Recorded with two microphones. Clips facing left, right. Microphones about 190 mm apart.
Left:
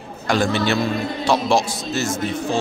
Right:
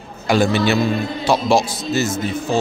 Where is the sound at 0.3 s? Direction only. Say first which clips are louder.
Right 3 dB; 5° right (ahead or behind).